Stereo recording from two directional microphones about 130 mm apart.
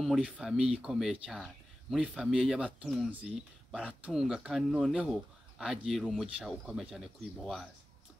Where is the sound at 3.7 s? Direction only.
10° right (ahead or behind).